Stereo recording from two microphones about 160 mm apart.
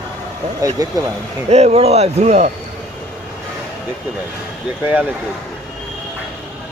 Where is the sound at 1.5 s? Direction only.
40° right (ahead or behind).